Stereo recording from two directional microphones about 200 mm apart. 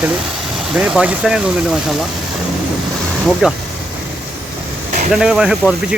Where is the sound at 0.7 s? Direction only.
5° right (ahead or behind).